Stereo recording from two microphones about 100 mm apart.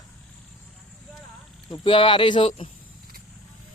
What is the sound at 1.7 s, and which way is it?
Speech, 60° left (ahead or behind).